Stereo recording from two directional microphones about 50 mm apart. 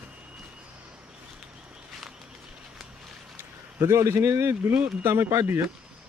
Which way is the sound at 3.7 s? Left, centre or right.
Right.